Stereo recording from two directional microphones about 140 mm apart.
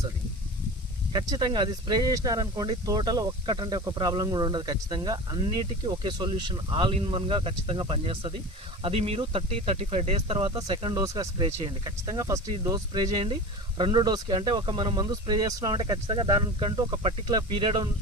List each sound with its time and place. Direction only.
1.1 s speech: 30° right (ahead or behind)